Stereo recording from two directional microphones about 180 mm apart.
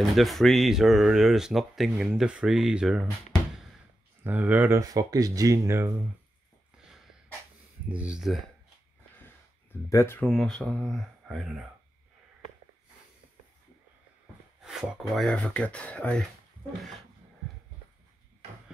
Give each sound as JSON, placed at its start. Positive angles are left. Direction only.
{"t": 0.0, "sound": "speech", "side_deg": 0}
{"t": 7.9, "sound": "speech", "side_deg": -5}
{"t": 9.8, "sound": "speech", "side_deg": 15}
{"t": 14.6, "sound": "speech", "side_deg": 0}